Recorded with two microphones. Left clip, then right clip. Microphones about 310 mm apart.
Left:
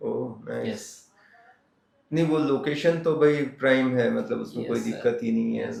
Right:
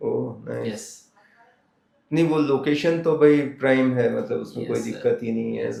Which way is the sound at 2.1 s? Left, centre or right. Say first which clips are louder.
Right 3 dB; centre.